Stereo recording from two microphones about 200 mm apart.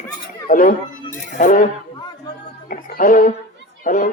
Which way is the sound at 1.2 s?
40° left (ahead or behind).